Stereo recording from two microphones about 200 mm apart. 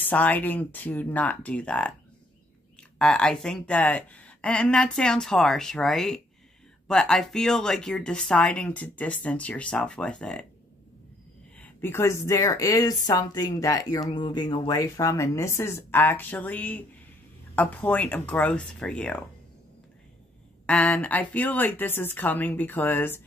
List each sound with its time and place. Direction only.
0.0 s speech: 10° left (ahead or behind)
3.0 s speech: 5° left (ahead or behind)
11.5 s speech: 10° left (ahead or behind)
20.6 s speech: 5° left (ahead or behind)